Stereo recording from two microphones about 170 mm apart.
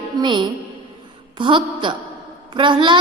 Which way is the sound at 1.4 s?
30° right (ahead or behind).